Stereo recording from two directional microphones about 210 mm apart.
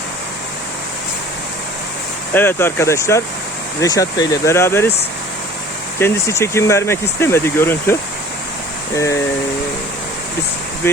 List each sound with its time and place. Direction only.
2.3 s speech: 10° left (ahead or behind)
6.0 s speech: 15° left (ahead or behind)